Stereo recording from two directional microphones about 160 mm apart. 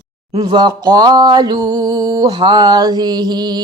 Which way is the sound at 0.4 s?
30° right (ahead or behind).